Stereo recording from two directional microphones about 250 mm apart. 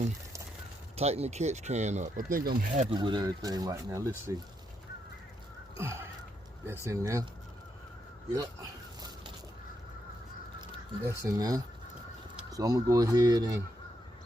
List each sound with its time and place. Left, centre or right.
0.9 s speech: right
2.9 s speech: centre
5.7 s a sound: centre
6.7 s speech: centre
9.0 s a sound: centre
11.2 s speech: centre